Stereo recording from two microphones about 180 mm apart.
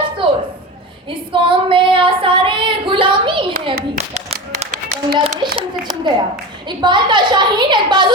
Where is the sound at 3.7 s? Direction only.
50° right (ahead or behind).